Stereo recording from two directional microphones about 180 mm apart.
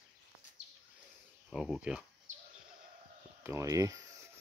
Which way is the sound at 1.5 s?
5° right (ahead or behind).